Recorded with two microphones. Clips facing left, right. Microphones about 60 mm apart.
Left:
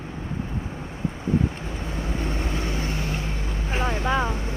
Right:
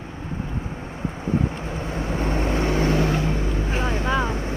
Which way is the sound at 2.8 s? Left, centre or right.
Right.